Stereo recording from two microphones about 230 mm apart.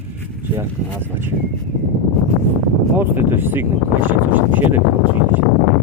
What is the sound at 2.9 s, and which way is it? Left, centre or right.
Speech, centre.